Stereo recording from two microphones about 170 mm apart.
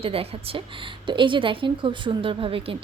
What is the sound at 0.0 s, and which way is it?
A woman's voice, 35° right (ahead or behind).